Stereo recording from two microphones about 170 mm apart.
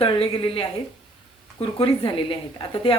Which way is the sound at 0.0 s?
35° left (ahead or behind).